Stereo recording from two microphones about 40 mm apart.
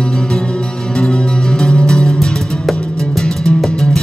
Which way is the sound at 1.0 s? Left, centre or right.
Centre.